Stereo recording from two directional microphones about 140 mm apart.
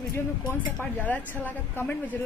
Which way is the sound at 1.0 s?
10° left (ahead or behind).